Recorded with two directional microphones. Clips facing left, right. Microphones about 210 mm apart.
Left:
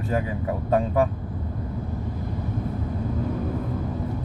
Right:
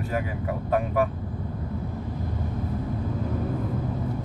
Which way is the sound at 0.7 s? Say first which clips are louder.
Left 3 dB; 30° left (ahead or behind).